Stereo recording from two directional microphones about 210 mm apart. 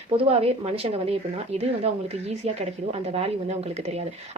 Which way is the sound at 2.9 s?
30° right (ahead or behind).